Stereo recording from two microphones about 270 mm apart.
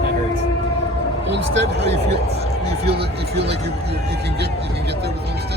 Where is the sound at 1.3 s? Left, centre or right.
Right.